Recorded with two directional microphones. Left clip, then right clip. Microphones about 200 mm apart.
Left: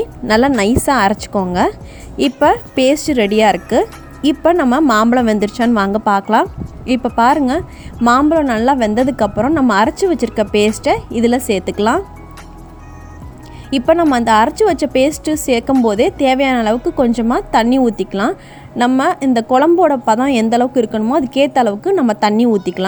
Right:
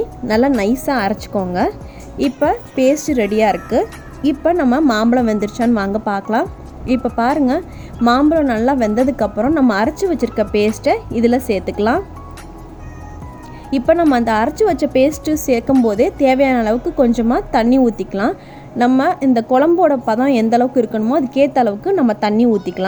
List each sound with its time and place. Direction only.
0.3 s a woman's voice: 40° left (ahead or behind)
13.7 s a woman's voice: 40° left (ahead or behind)